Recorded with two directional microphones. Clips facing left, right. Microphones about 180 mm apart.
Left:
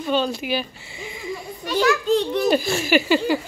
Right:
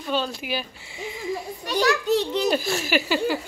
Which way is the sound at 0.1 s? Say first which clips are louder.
Left 4 dB; 5° right (ahead or behind).